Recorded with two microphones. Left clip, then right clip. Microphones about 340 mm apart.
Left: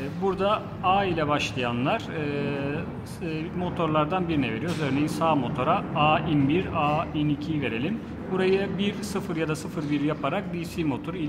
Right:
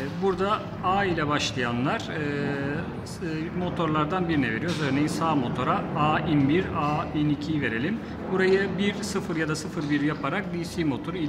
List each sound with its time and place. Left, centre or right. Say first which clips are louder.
0.2 s a man's voice: left 1 dB; centre
3.7 s a man's voice: left 2 dB; centre